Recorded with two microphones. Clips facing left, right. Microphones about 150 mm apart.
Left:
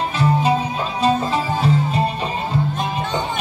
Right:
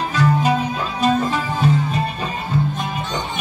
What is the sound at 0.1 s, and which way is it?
Music, 30° left (ahead or behind).